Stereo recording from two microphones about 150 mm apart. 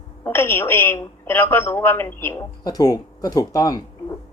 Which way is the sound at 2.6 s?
25° left (ahead or behind).